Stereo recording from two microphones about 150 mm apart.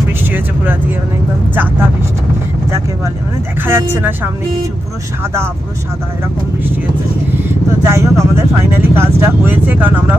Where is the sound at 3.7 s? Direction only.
15° right (ahead or behind).